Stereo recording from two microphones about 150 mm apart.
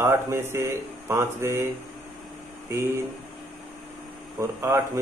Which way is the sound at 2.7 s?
15° right (ahead or behind).